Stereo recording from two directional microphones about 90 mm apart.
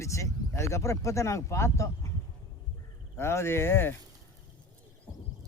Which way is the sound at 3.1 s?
30° left (ahead or behind).